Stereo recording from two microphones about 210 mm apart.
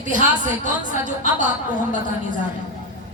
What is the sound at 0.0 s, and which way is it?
Speech, 40° right (ahead or behind).